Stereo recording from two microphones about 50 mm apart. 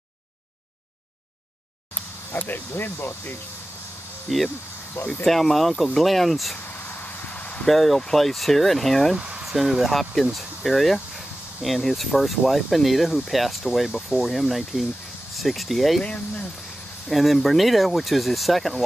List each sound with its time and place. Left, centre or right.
2.3 s speech: left
4.3 s speech: centre
6.7 s a sound: left
7.6 s speech: centre
16.0 s speech: left
17.1 s speech: centre